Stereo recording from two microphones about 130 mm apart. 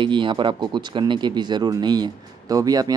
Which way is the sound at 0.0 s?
40° right (ahead or behind).